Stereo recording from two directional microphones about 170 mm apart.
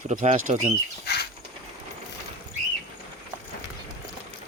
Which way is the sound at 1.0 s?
70° left (ahead or behind).